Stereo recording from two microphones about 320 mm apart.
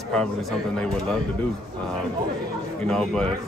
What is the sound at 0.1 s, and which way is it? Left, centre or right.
Speech, centre.